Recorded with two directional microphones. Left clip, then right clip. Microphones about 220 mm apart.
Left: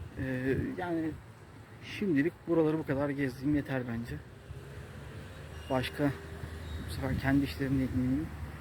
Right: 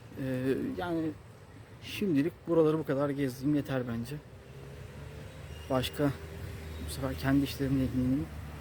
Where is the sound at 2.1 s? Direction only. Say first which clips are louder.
Right 1 dB; 15° right (ahead or behind).